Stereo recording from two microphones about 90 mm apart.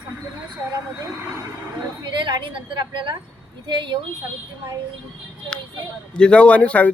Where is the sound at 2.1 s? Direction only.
65° right (ahead or behind).